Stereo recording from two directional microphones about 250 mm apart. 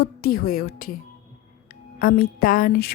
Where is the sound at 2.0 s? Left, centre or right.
Left.